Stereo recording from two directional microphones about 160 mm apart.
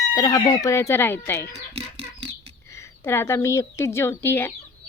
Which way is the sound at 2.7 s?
15° left (ahead or behind).